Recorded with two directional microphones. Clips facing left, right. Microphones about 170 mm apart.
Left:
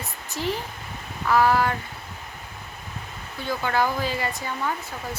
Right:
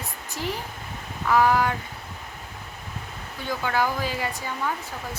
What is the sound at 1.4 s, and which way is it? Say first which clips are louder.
Speech: even; 15° right (ahead or behind).